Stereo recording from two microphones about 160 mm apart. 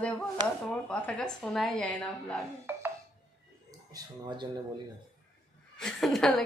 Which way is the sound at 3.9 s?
30° right (ahead or behind).